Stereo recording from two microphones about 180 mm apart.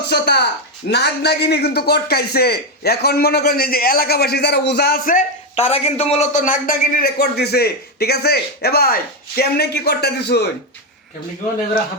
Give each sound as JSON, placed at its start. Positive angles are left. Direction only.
{"t": 0.1, "sound": "a man's voice", "side_deg": 65}